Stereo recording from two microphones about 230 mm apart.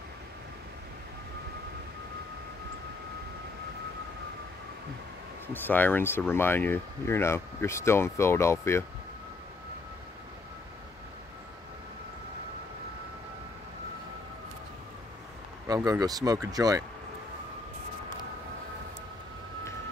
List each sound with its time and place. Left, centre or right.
5.5 s speech: centre
15.6 s speech: centre